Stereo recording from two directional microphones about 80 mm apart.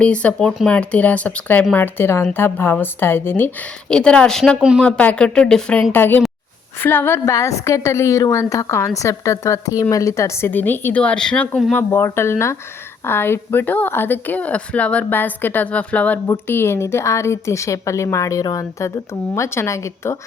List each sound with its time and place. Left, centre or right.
0.0 s speech: centre
3.8 s speech: centre
5.9 s speech: left
7.3 s a woman's voice: left; by 11.6 s centre
11.8 s a woman's voice: left
16.5 s a woman's voice: left